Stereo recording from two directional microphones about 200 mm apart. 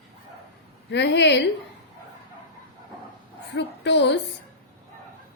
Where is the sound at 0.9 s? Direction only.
60° left (ahead or behind).